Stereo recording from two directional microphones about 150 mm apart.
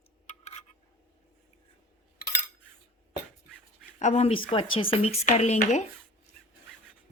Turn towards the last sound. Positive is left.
turn(degrees=50)  # may be behind; listen again after turning